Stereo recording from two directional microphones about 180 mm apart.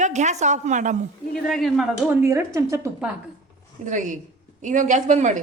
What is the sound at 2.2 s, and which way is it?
Speech, 15° right (ahead or behind).